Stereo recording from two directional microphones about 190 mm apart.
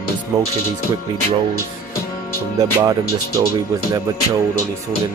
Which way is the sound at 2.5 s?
15° right (ahead or behind).